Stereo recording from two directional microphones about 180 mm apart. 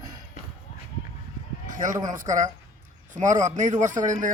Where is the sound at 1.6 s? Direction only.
45° right (ahead or behind).